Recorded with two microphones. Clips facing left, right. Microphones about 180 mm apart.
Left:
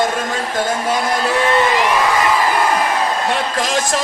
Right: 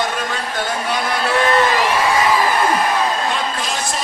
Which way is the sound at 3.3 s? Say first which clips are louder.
Left 3 dB; 90° left.